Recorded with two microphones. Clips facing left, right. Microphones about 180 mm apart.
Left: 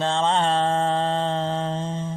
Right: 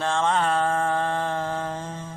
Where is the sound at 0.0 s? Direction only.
20° left (ahead or behind).